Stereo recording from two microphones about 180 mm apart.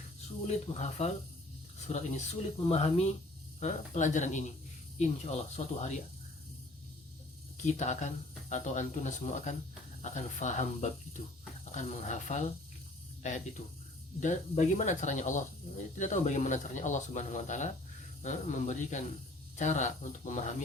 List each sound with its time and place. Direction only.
0.4 s speech: 35° left (ahead or behind)
7.5 s speech: 40° left (ahead or behind)
14.2 s speech: 40° left (ahead or behind)